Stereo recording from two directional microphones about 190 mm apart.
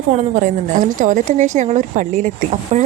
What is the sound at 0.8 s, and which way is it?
A woman's voice, 40° right (ahead or behind).